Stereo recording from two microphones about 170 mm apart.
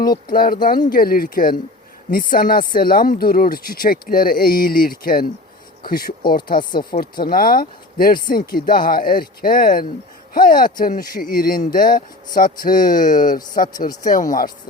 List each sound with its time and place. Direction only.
0.3 s speech: 60° left (ahead or behind)
6.9 s speech: 45° left (ahead or behind)
7.3 s speech: 60° left (ahead or behind)